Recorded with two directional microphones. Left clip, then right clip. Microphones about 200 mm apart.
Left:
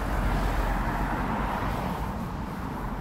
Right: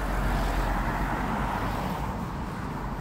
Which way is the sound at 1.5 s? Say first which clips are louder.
Even; 55° right (ahead or behind).